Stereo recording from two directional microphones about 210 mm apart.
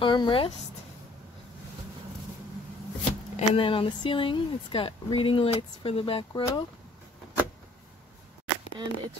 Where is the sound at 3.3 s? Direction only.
25° left (ahead or behind).